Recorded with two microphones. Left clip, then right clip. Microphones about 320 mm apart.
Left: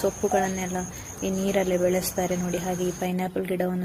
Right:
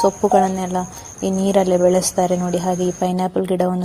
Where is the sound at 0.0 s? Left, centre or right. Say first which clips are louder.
Right 9 dB; left.